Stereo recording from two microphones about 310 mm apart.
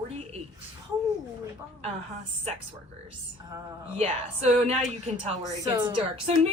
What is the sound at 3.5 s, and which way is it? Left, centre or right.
A woman's voice, centre.